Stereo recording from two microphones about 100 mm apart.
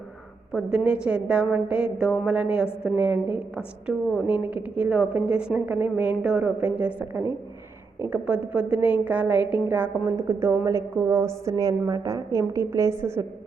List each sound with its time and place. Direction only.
0.5 s a woman's voice: 5° right (ahead or behind)
3.8 s a woman's voice: centre (ahead or behind)
4.3 s a woman's voice: 15° right (ahead or behind)